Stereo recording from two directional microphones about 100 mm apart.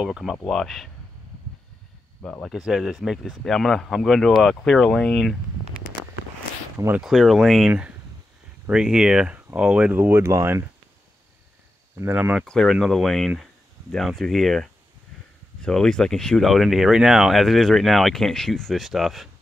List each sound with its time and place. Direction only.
0.0 s speech: 5° right (ahead or behind)
2.4 s speech: 5° right (ahead or behind)
7.0 s speech: centre (ahead or behind); by 10.6 s 25° right (ahead or behind)
12.0 s speech: 15° right (ahead or behind)
12.4 s speech: 5° left (ahead or behind)